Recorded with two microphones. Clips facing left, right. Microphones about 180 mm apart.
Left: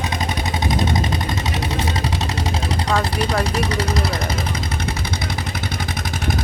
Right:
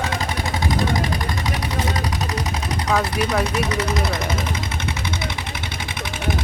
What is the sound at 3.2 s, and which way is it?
Speech, 35° left (ahead or behind).